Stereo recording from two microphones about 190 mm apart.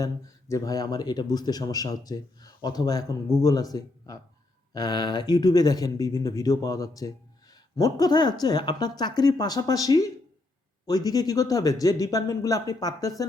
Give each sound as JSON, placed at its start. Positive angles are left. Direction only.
{"t": 0.0, "sound": "speech", "side_deg": 15}